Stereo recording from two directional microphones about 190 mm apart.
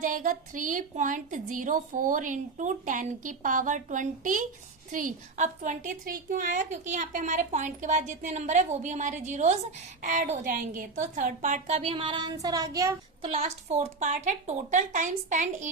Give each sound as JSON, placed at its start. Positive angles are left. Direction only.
{"t": 0.0, "sound": "a woman's voice", "side_deg": -45}
{"t": 13.2, "sound": "a woman's voice", "side_deg": -35}